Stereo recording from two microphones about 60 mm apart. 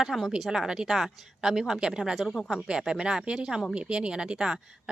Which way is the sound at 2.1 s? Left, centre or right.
Centre.